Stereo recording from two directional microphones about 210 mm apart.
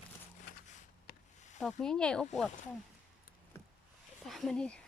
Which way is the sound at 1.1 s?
50° left (ahead or behind).